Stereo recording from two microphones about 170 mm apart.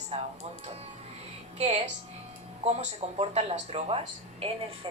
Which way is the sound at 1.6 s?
40° right (ahead or behind).